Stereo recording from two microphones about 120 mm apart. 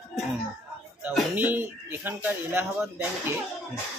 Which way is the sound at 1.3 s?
15° right (ahead or behind).